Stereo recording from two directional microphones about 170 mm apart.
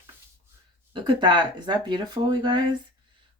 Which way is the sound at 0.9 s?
25° right (ahead or behind).